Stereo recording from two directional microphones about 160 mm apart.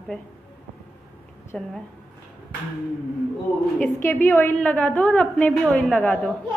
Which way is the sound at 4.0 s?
15° left (ahead or behind).